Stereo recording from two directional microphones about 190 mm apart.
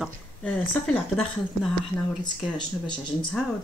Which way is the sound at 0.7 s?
10° left (ahead or behind).